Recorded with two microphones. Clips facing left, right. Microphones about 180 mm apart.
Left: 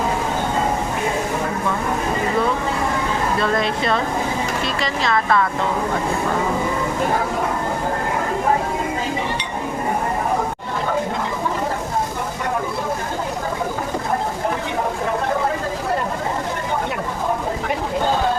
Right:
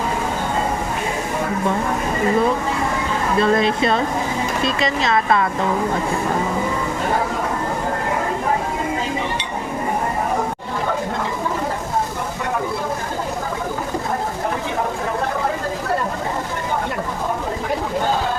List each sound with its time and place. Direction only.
3.4 s speech: 20° right (ahead or behind)